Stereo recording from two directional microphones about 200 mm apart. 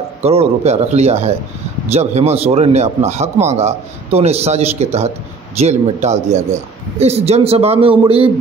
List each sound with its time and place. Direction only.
0.2 s a man's voice: 30° right (ahead or behind)